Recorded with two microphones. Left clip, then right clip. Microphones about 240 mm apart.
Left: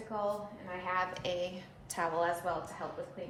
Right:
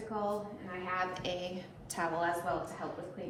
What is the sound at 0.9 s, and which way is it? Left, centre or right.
A woman's voice, left.